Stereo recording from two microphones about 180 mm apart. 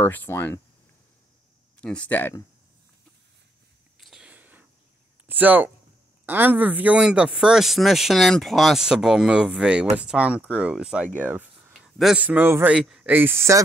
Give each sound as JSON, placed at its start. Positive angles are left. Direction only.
{"t": 0.0, "sound": "speech", "side_deg": 10}
{"t": 1.8, "sound": "speech", "side_deg": 5}
{"t": 4.0, "sound": "a sound", "side_deg": -5}
{"t": 5.3, "sound": "a man's voice", "side_deg": -10}